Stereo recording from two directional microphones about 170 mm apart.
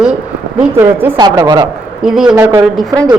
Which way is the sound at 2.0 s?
5° right (ahead or behind).